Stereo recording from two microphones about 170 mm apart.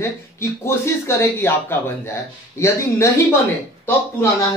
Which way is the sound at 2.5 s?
15° left (ahead or behind).